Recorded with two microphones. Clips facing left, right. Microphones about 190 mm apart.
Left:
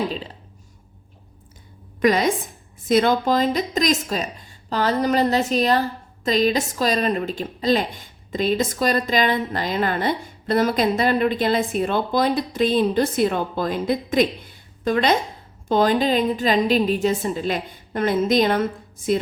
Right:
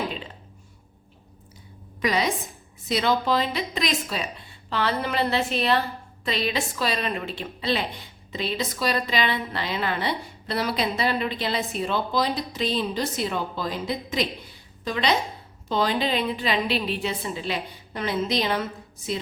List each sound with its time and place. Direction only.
2.0 s a woman's voice: 50° left (ahead or behind)